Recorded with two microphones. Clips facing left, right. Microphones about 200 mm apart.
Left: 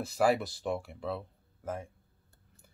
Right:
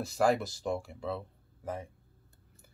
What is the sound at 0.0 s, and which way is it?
Speech, 5° left (ahead or behind).